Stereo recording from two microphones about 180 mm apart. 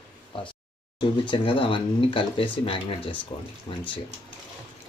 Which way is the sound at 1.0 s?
25° left (ahead or behind).